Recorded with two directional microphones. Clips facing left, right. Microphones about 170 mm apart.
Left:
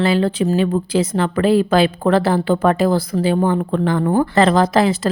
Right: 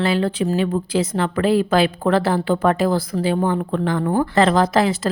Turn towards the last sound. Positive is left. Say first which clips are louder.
# left 2 dB
turn(degrees=30)  # may be behind; listen again after turning